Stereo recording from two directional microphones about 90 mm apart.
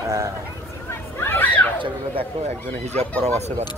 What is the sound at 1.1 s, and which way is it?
Chatter, 25° left (ahead or behind).